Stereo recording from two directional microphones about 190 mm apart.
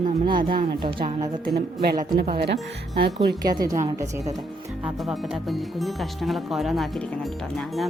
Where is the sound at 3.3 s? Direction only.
20° right (ahead or behind).